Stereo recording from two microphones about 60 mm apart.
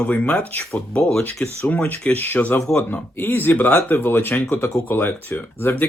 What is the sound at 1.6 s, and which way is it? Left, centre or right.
Speech, left.